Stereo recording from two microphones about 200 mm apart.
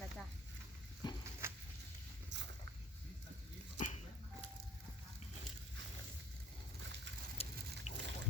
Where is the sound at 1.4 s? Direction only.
10° right (ahead or behind).